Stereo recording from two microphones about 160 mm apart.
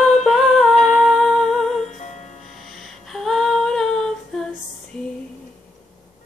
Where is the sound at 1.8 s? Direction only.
45° left (ahead or behind).